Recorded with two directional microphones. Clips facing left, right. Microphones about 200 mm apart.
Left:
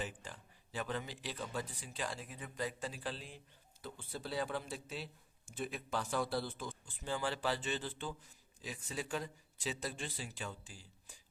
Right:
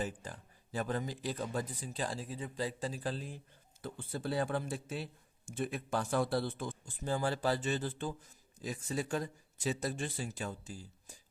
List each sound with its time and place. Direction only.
0.0 s speech: 40° right (ahead or behind)